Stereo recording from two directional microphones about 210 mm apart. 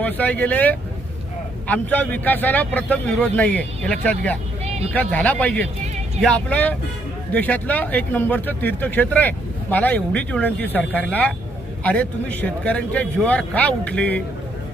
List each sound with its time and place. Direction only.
0.0 s speech: 5° left (ahead or behind)
4.6 s vehicle: 30° right (ahead or behind)
4.9 s speech: 5° left (ahead or behind)